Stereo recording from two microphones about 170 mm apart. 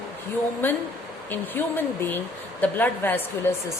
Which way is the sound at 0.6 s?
10° left (ahead or behind).